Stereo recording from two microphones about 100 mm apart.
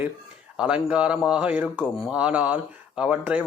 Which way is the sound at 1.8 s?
5° right (ahead or behind).